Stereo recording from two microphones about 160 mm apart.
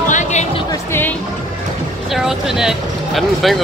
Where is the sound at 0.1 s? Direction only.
50° left (ahead or behind).